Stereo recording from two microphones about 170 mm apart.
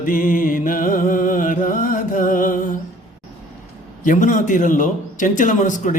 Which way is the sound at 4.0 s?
50° left (ahead or behind).